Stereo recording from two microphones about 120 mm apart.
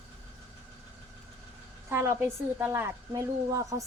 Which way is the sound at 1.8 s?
20° right (ahead or behind).